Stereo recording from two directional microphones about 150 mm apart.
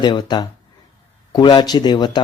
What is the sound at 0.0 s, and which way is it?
A man's voice, 30° left (ahead or behind).